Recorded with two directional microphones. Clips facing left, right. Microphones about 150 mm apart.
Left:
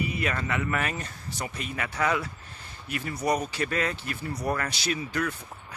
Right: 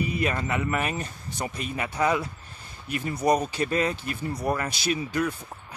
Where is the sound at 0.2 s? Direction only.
25° right (ahead or behind).